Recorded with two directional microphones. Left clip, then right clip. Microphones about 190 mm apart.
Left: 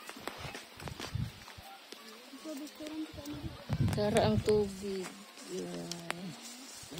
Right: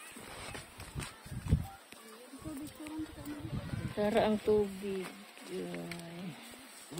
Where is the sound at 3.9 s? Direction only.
5° left (ahead or behind).